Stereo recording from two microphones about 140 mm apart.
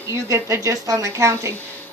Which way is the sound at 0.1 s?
20° right (ahead or behind).